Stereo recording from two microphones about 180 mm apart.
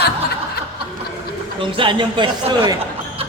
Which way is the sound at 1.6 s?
30° right (ahead or behind).